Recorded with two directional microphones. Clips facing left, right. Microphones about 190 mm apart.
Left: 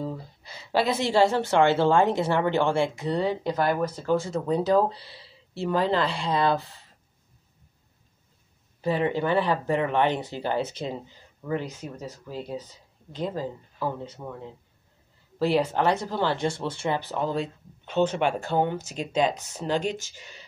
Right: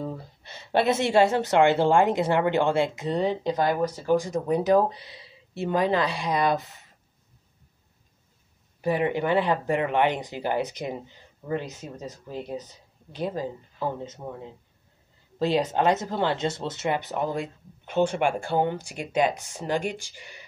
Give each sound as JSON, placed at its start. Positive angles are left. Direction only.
{"t": 0.1, "sound": "a sound", "side_deg": -25}
{"t": 0.8, "sound": "speech", "side_deg": -25}
{"t": 8.8, "sound": "speech", "side_deg": -15}
{"t": 15.3, "sound": "speech", "side_deg": -20}